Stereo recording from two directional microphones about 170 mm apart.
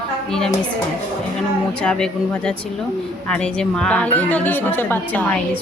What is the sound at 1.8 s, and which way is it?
A woman's voice, 5° left (ahead or behind).